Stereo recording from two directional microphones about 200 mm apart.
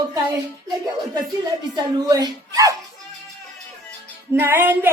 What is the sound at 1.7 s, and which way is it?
Speech, 20° right (ahead or behind).